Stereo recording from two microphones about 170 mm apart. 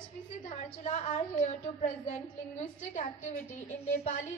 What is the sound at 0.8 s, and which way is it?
A woman's voice, 40° left (ahead or behind).